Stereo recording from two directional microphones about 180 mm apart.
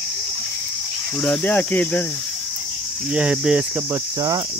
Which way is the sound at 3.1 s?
5° right (ahead or behind).